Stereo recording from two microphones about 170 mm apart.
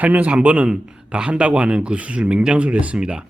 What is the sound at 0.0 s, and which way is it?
Speech, 10° right (ahead or behind).